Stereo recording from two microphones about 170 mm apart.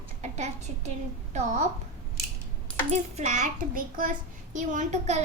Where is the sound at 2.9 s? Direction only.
45° right (ahead or behind).